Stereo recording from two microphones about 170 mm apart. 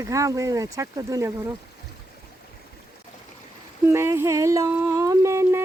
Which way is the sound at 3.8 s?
15° right (ahead or behind).